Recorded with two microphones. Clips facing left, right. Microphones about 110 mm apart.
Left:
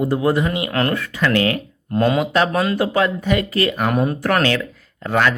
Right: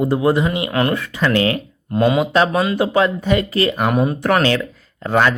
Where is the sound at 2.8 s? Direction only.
25° right (ahead or behind).